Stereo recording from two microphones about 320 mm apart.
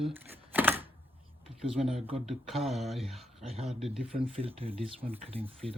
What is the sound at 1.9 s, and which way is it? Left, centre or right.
Speech, centre.